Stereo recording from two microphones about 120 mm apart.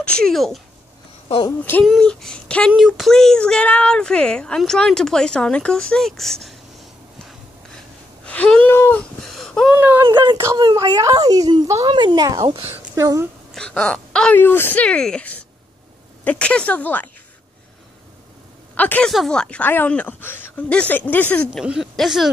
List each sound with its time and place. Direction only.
0.0 s speech: 5° left (ahead or behind)
1.6 s speech: 10° left (ahead or behind)
8.3 s speech: 10° left (ahead or behind)
9.2 s a sound: centre (ahead or behind)
9.8 s speech: 15° right (ahead or behind)
10.0 s speech: 40° right (ahead or behind)
10.3 s speech: 25° right (ahead or behind)
11.9 s speech: 40° right (ahead or behind)
13.6 s speech: 10° left (ahead or behind)
18.8 s speech: 15° left (ahead or behind)
21.6 s speech: 5° right (ahead or behind)